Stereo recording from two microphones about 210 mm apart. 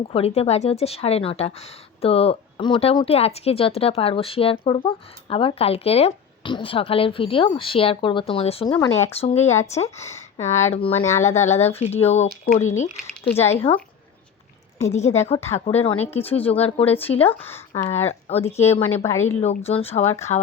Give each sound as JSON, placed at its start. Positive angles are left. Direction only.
{"t": 0.1, "sound": "speech", "side_deg": 30}
{"t": 8.7, "sound": "speech", "side_deg": 15}
{"t": 9.1, "sound": "speech", "side_deg": 30}
{"t": 13.3, "sound": "speech", "side_deg": 30}
{"t": 14.8, "sound": "speech", "side_deg": 30}
{"t": 17.2, "sound": "speech", "side_deg": 10}
{"t": 18.3, "sound": "speech", "side_deg": 30}
{"t": 18.9, "sound": "speech", "side_deg": 15}
{"t": 19.4, "sound": "speech", "side_deg": 30}